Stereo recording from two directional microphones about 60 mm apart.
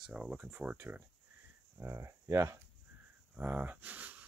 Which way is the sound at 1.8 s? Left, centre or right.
Right.